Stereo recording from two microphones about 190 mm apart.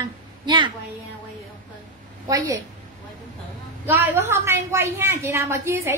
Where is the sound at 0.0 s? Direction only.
25° right (ahead or behind).